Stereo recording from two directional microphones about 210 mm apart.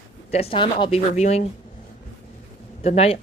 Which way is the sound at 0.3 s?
30° left (ahead or behind).